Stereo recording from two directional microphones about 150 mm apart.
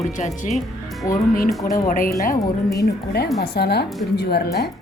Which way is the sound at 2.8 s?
90° left.